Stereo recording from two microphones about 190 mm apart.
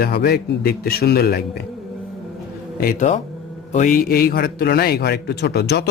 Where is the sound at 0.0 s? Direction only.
55° left (ahead or behind).